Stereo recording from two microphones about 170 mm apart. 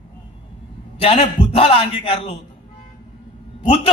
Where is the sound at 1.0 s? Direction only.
35° left (ahead or behind).